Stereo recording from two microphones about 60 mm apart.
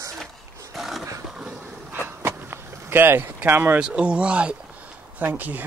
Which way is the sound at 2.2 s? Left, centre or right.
Right.